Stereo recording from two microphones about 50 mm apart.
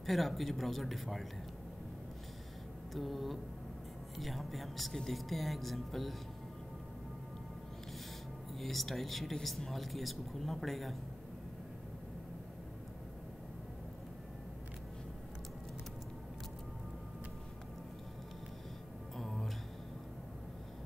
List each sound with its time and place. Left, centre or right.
0.0 s speech: centre
2.9 s speech: centre
8.5 s speech: centre
19.1 s music: centre